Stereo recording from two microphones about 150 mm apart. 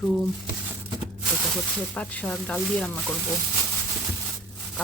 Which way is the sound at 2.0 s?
5° left (ahead or behind).